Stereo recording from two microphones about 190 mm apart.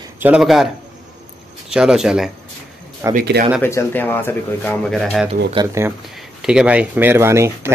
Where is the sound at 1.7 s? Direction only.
5° right (ahead or behind).